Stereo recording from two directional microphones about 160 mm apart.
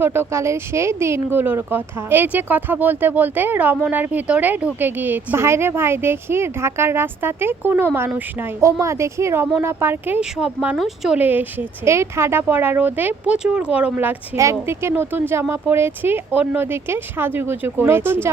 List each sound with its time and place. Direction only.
0.0 s speech: 15° right (ahead or behind)